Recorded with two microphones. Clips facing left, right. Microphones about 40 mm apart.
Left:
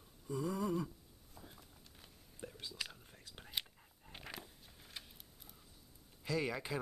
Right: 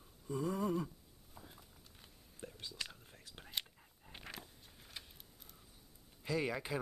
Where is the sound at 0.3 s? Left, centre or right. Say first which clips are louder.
Right 1 dB; right.